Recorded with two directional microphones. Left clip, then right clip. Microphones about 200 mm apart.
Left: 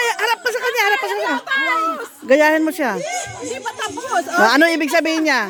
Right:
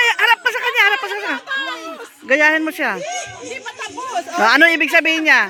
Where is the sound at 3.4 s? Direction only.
45° left (ahead or behind).